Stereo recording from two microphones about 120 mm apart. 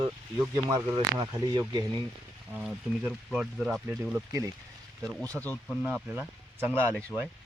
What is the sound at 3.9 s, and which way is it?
Speech, 25° right (ahead or behind).